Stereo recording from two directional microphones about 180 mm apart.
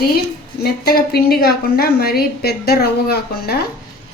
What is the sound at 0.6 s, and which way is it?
A woman's voice, 60° left (ahead or behind).